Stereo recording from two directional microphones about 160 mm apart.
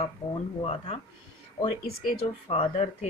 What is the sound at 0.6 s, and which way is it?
Speech, 40° left (ahead or behind).